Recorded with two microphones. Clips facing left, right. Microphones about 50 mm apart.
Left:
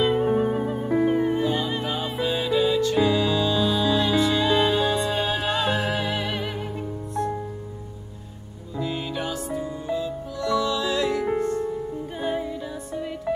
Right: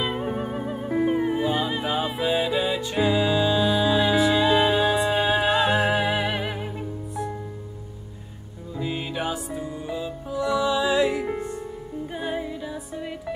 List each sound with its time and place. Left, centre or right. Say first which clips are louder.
0.0 s music: left 6 dB; centre
8.7 s music: even; centre